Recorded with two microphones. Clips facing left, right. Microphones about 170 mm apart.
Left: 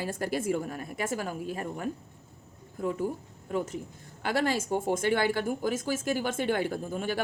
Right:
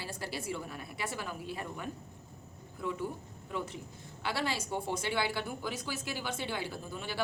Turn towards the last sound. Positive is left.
turn(degrees=45)  # may be behind; listen again after turning